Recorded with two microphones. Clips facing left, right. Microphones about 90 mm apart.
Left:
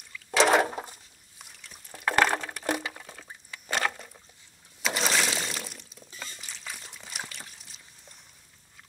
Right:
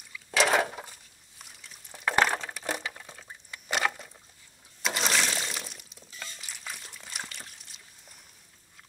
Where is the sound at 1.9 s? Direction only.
5° right (ahead or behind).